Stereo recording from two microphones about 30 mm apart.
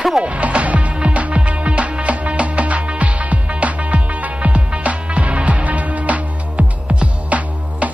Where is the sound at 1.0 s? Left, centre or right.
Right.